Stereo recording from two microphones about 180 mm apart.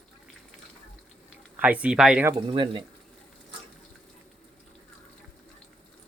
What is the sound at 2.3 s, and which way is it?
Speech, 25° right (ahead or behind).